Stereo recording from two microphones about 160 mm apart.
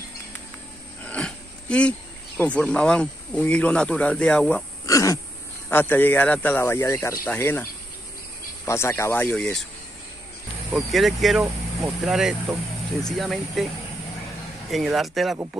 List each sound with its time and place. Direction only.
1.0 s speech: 5° left (ahead or behind)
4.8 s throat clearing: 20° left (ahead or behind)
5.7 s speech: 15° left (ahead or behind)
8.6 s speech: 15° left (ahead or behind)
10.7 s speech: centre (ahead or behind)
14.7 s speech: centre (ahead or behind)